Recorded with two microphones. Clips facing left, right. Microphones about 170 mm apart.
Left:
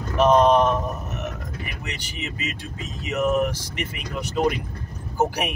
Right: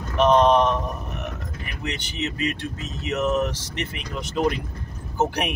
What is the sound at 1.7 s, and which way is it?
Speech, 10° left (ahead or behind).